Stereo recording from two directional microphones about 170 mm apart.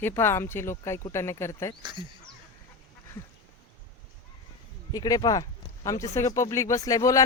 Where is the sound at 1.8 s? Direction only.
30° right (ahead or behind).